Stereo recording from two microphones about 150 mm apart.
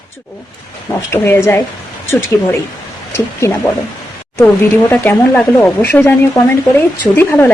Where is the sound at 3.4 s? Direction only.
20° left (ahead or behind).